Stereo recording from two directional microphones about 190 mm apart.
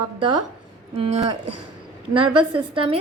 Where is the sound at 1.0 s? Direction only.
35° right (ahead or behind).